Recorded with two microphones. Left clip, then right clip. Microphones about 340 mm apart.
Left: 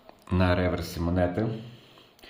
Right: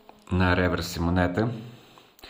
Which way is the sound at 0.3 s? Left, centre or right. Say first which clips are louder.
Right 2 dB; centre.